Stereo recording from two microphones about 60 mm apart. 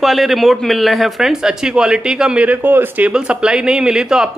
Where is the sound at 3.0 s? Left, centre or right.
Centre.